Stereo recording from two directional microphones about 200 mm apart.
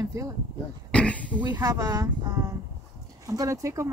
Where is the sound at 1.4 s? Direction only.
20° right (ahead or behind).